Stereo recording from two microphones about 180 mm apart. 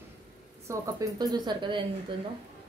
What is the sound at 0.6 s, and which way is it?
A woman's voice, 15° right (ahead or behind).